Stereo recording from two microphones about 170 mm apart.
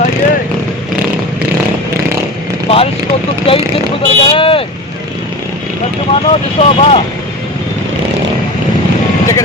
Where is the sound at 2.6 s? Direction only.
35° left (ahead or behind).